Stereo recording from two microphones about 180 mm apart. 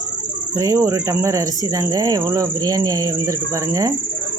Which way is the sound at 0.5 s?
20° right (ahead or behind).